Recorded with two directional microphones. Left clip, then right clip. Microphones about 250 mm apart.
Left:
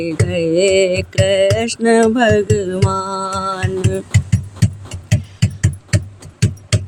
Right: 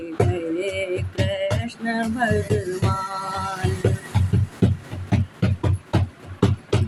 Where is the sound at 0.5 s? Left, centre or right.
Left.